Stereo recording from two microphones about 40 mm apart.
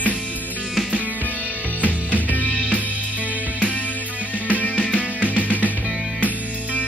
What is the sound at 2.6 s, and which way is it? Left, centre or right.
Music, right.